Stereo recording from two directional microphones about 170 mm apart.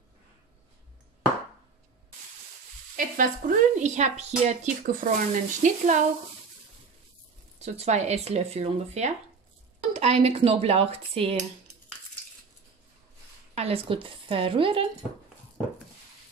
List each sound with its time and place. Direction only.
3.0 s speech: 55° right (ahead or behind)
7.5 s speech: 40° right (ahead or behind)
13.6 s speech: 35° right (ahead or behind)